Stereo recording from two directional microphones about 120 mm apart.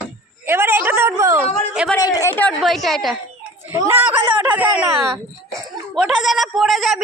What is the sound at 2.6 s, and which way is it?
Speech, centre (ahead or behind).